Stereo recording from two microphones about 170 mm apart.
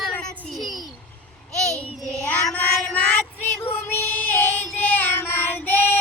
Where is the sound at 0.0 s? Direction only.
5° left (ahead or behind).